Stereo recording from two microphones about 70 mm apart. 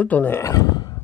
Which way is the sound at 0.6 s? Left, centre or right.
Left.